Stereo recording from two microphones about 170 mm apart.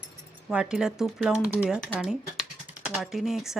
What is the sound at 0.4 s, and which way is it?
Speech, 5° right (ahead or behind).